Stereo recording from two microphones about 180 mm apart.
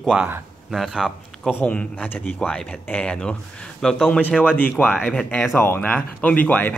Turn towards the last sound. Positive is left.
turn(degrees=10)  # may be behind; listen again after turning